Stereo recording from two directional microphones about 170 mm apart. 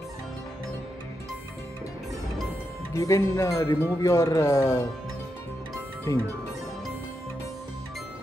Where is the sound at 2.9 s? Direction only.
20° left (ahead or behind).